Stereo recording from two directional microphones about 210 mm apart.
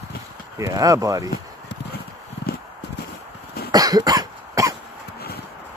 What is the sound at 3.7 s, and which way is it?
Cough, 15° right (ahead or behind).